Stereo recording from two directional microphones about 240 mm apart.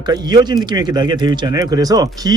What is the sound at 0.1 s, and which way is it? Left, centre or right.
Speech, centre.